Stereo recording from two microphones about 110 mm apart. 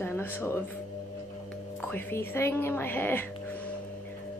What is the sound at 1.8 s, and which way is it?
A woman's voice, 20° left (ahead or behind).